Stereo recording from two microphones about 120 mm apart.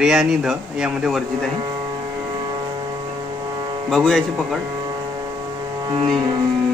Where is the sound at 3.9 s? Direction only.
5° left (ahead or behind).